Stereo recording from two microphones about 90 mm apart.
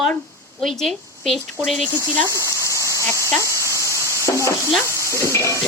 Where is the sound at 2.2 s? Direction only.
35° left (ahead or behind).